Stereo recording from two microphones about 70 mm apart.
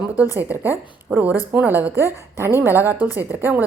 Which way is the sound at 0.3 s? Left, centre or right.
Right.